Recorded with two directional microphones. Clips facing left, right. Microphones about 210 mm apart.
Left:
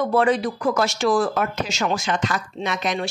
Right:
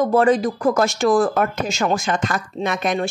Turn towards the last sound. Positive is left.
turn(degrees=-50)  # may be behind; listen again after turning